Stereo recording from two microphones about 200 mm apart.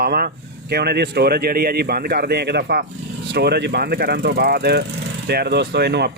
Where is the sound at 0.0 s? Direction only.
50° right (ahead or behind).